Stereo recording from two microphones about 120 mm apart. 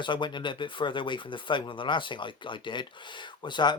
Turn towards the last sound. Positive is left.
turn(degrees=40)  # may be behind; listen again after turning